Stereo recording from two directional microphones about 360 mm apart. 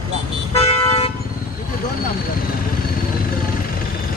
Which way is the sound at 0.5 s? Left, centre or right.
Centre.